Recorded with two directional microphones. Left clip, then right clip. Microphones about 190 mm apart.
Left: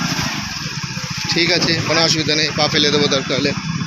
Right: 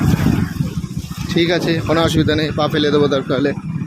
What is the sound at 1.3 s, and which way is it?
Speech, 45° right (ahead or behind).